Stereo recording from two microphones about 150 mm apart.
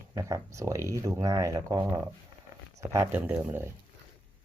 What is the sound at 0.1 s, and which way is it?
Speech, 20° right (ahead or behind).